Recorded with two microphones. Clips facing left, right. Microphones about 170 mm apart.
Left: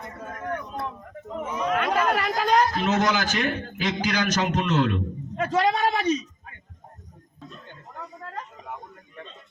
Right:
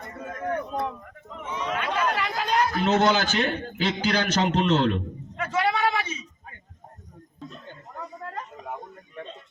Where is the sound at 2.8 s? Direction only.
30° right (ahead or behind).